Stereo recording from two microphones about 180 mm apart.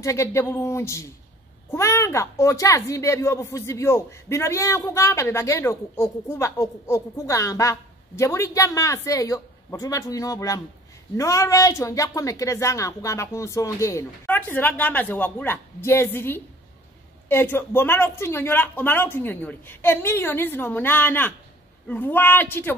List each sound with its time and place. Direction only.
0.0 s speech: 15° left (ahead or behind)